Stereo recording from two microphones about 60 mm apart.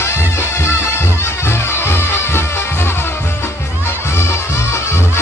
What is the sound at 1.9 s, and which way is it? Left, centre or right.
Music, left.